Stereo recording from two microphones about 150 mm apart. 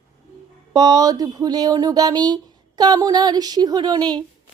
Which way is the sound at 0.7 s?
25° right (ahead or behind).